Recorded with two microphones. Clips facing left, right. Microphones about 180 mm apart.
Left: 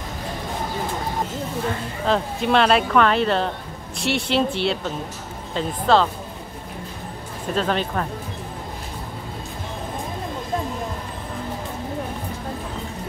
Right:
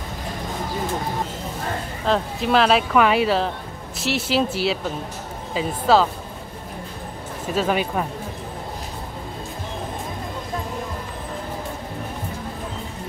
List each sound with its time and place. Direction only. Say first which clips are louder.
2.0 s speech: even; centre (ahead or behind)
7.4 s speech: right 1 dB; 5° right (ahead or behind)